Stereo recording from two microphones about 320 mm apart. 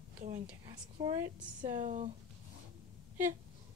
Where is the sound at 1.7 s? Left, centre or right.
Right.